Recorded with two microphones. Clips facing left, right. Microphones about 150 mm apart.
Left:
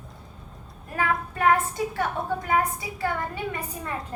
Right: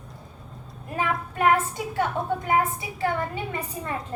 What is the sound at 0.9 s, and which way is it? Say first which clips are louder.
Speech: left 1 dB; 20° right (ahead or behind).